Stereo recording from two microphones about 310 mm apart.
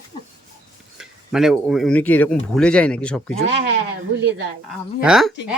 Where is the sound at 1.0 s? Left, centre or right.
Centre.